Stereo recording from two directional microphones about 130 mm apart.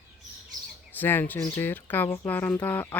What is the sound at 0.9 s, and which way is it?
Speech, 15° left (ahead or behind).